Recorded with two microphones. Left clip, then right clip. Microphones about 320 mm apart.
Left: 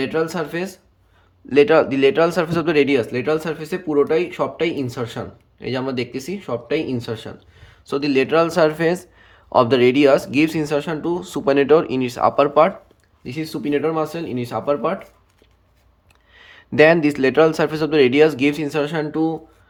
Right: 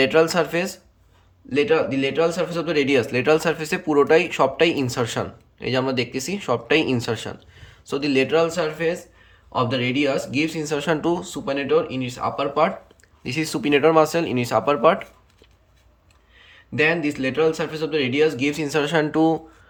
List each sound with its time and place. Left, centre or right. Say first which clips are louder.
0.0 s speech: right 4 dB; centre
1.5 s speech: left 6 dB; centre
13.2 s speech: right 2 dB; centre
16.3 s speech: left 7 dB; centre